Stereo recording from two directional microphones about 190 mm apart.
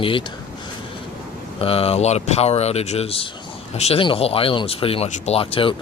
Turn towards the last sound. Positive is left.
turn(degrees=30)  # may be behind; listen again after turning